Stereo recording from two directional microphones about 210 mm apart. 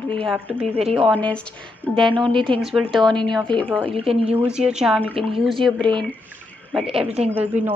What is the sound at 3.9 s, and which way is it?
Speech, 25° right (ahead or behind).